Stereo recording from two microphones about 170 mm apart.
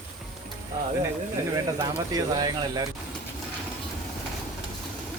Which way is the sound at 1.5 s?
25° right (ahead or behind).